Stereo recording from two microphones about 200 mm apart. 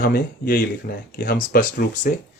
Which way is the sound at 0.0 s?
50° left (ahead or behind).